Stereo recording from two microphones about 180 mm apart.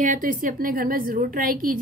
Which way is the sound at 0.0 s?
45° right (ahead or behind).